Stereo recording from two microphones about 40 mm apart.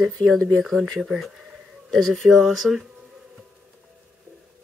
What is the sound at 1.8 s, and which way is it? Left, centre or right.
Speech, centre.